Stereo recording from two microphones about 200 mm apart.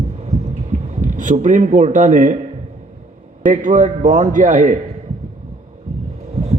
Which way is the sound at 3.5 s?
40° right (ahead or behind).